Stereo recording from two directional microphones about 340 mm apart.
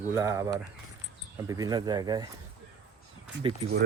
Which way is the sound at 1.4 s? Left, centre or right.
Centre.